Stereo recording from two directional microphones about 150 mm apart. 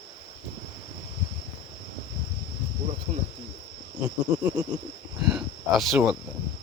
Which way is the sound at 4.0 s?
10° right (ahead or behind).